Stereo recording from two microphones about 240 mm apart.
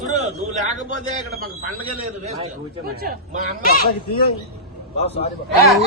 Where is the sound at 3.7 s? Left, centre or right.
Left.